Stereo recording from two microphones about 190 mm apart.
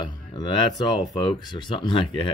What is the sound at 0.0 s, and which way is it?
Speech, 20° left (ahead or behind).